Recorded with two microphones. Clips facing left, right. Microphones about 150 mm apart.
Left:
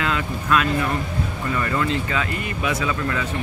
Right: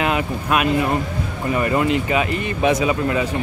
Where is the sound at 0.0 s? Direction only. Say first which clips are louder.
Right 4 dB; 20° right (ahead or behind).